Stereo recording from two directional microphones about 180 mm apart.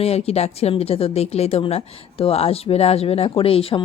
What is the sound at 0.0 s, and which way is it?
Speech, 35° left (ahead or behind).